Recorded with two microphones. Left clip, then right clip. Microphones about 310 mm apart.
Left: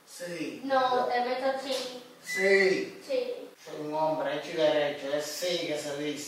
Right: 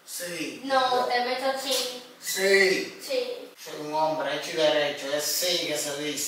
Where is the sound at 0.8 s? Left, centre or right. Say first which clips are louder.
Right 2 dB; centre.